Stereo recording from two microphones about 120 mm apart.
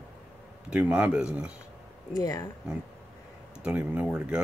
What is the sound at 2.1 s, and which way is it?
Speech, 30° left (ahead or behind).